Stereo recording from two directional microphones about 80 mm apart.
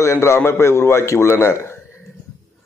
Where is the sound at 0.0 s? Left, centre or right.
Left.